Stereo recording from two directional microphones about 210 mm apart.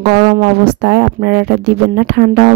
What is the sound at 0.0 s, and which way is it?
Speech, 50° right (ahead or behind).